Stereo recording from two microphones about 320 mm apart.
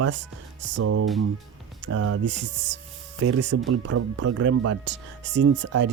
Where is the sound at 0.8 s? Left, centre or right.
Right.